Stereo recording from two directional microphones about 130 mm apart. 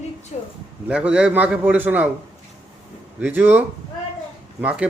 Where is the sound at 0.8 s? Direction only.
10° right (ahead or behind).